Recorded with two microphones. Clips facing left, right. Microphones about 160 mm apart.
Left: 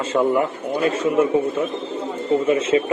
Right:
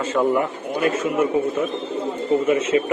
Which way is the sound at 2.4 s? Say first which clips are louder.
Left 1 dB; 30° left (ahead or behind).